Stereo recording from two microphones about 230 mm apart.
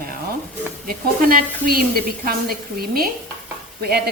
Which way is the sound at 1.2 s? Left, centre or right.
Right.